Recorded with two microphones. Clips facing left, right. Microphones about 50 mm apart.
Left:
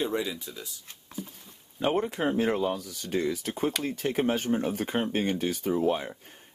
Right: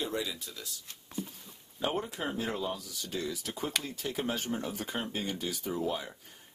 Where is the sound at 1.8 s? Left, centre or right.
Left.